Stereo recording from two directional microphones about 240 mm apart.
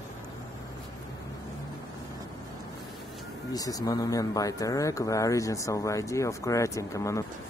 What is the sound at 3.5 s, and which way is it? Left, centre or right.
Speech, centre.